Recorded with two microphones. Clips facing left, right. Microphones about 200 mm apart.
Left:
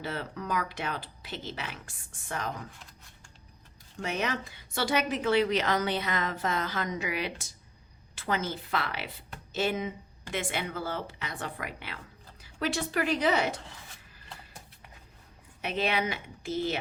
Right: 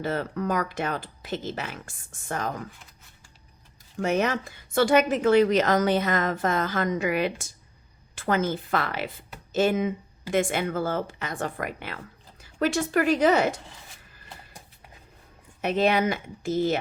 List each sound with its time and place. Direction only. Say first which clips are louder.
0.0 s a woman's voice: right 8 dB; 45° right (ahead or behind)
4.0 s a woman's voice: right 7 dB; 45° right (ahead or behind)
15.6 s a woman's voice: right 7 dB; 45° right (ahead or behind)